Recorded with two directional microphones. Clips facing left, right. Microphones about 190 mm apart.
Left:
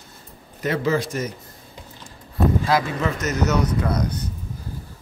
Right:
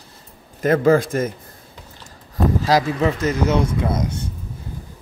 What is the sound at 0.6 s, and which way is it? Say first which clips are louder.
Speech: right 7 dB; 50° right (ahead or behind).